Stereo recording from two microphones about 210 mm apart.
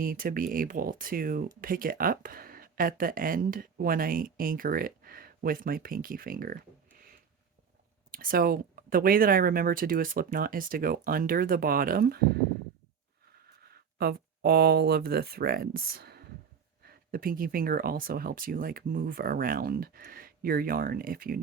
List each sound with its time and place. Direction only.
0.0 s speech: 40° right (ahead or behind)
8.1 s speech: 45° right (ahead or behind)
13.7 s speech: 50° right (ahead or behind)